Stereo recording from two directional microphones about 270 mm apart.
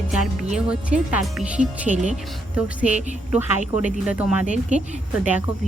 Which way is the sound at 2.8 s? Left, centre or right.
Centre.